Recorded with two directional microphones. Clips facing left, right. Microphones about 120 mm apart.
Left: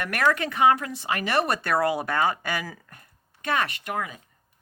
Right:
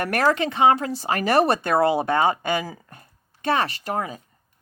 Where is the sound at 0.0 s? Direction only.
40° right (ahead or behind).